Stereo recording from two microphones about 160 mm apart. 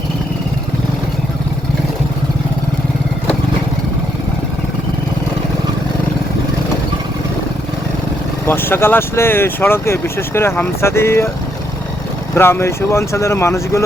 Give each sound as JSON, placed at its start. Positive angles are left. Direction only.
{"t": 8.4, "sound": "speech", "side_deg": 15}
{"t": 12.3, "sound": "speech", "side_deg": 15}